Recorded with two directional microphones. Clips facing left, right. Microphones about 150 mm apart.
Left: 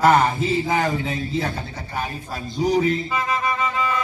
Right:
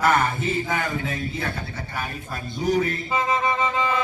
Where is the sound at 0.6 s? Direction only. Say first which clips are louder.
Left 5 dB; 35° left (ahead or behind).